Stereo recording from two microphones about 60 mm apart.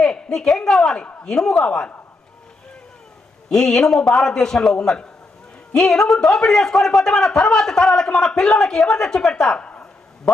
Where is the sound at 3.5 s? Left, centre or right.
Centre.